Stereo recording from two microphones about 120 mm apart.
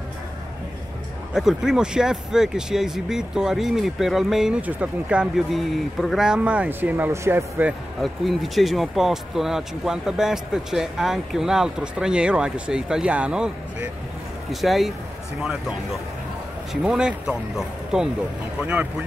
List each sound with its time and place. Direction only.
1.3 s speech: 5° right (ahead or behind)
8.0 s speech: centre (ahead or behind)
16.8 s speech: 10° right (ahead or behind)